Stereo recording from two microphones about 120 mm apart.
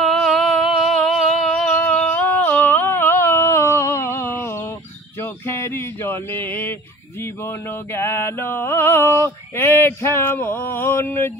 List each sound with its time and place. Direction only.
0.0 s a sound: centre (ahead or behind); by 4.4 s 20° left (ahead or behind)
5.6 s male singing: 20° left (ahead or behind)
7.9 s male singing: 20° left (ahead or behind)